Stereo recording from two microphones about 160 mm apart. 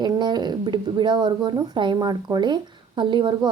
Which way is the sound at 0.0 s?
25° right (ahead or behind).